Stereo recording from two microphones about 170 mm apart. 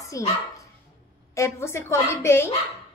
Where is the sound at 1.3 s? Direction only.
15° left (ahead or behind).